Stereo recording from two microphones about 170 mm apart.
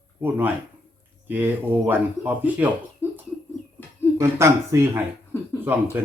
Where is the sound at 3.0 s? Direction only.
15° left (ahead or behind).